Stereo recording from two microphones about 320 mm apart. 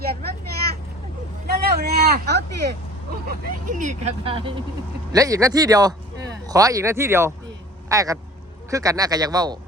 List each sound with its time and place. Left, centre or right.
0.0 s vehicle: right
1.7 s a sound: right
3.2 s speech: right